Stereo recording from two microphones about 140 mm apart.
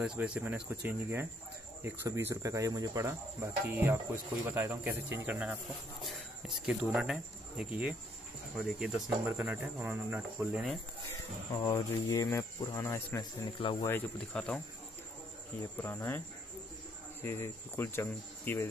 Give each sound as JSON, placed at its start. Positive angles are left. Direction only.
{"t": 0.0, "sound": "speech", "side_deg": -10}
{"t": 11.5, "sound": "speech", "side_deg": 25}
{"t": 13.8, "sound": "speech", "side_deg": 10}
{"t": 15.8, "sound": "speech", "side_deg": 15}
{"t": 17.2, "sound": "speech", "side_deg": 15}